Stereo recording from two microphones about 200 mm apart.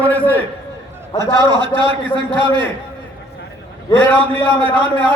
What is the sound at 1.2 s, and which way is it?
Speech, 20° right (ahead or behind).